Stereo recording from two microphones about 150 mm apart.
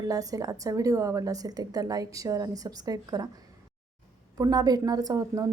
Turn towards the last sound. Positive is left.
turn(degrees=-20)  # may be behind; listen again after turning